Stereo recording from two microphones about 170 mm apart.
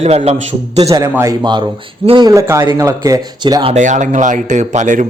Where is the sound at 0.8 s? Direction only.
20° right (ahead or behind).